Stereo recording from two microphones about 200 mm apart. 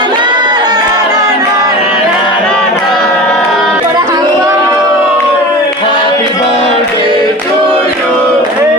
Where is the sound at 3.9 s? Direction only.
15° right (ahead or behind).